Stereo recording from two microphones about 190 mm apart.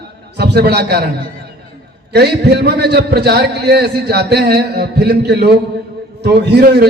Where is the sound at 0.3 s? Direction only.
60° right (ahead or behind).